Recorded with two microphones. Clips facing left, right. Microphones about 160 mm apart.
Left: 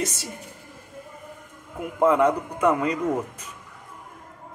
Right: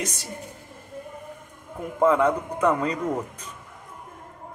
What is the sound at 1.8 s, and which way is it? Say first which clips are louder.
A man's voice: left 1 dB; 10° left (ahead or behind).